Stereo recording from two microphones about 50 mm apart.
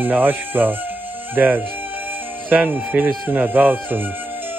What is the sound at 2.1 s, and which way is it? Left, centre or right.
Music, right.